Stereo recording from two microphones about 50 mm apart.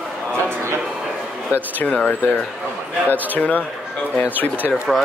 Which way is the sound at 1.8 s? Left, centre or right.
Left.